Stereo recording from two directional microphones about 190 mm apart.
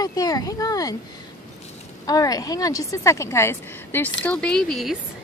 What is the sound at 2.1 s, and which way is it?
A woman's voice, 20° left (ahead or behind).